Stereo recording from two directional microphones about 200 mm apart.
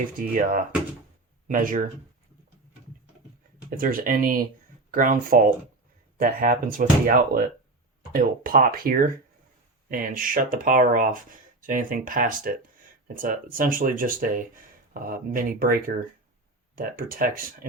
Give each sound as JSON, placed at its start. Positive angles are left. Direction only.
{"t": 0.2, "sound": "speech", "side_deg": -40}
{"t": 3.8, "sound": "speech", "side_deg": -45}